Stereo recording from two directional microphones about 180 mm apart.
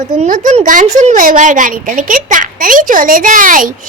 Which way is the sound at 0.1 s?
45° right (ahead or behind).